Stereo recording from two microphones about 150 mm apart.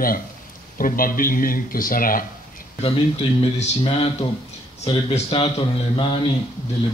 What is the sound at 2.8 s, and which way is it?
Speech, 45° left (ahead or behind).